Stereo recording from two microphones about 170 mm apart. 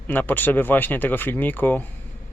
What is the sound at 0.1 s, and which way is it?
Speech, 10° left (ahead or behind).